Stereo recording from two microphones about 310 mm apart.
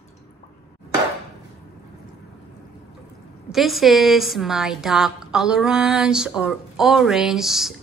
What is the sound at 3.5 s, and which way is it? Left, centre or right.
A woman's voice, centre.